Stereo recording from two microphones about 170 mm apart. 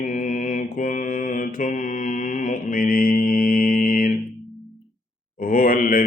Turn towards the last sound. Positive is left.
turn(degrees=55)  # may be behind; listen again after turning